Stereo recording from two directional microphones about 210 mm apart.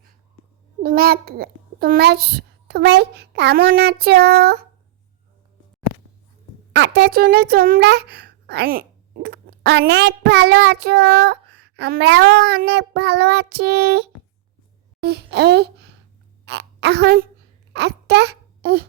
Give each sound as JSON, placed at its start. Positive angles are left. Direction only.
{"t": 0.8, "sound": "a child's voice", "side_deg": -45}
{"t": 6.7, "sound": "a child's voice", "side_deg": -55}